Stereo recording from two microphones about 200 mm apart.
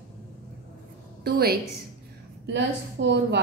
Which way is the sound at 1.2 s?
50° right (ahead or behind).